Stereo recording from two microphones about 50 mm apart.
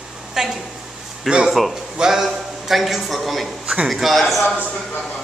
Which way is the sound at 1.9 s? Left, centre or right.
Centre.